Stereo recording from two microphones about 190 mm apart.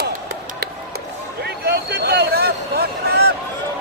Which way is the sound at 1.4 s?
55° right (ahead or behind).